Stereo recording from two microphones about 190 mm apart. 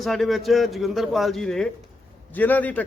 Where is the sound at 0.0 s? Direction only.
Centre (ahead or behind).